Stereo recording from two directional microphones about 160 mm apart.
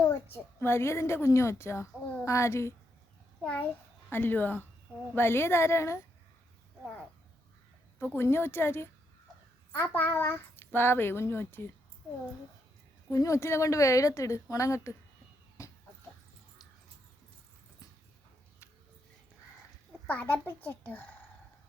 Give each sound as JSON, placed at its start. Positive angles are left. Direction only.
{"t": 0.6, "sound": "a woman's voice", "side_deg": 15}
{"t": 7.9, "sound": "a woman's voice", "side_deg": 15}
{"t": 13.1, "sound": "a woman's voice", "side_deg": 20}
{"t": 20.1, "sound": "a woman's voice", "side_deg": 10}